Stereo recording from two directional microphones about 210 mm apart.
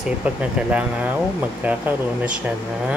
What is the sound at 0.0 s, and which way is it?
Speech, 5° right (ahead or behind).